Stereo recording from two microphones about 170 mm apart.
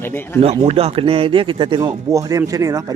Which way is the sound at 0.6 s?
35° right (ahead or behind).